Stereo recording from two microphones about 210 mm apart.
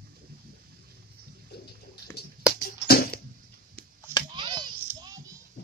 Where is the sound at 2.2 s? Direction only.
50° left (ahead or behind).